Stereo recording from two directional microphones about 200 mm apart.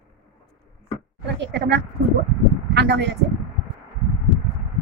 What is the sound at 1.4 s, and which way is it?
Speech, 60° right (ahead or behind).